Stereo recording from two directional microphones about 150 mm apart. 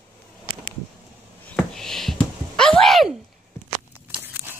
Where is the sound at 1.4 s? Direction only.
5° left (ahead or behind).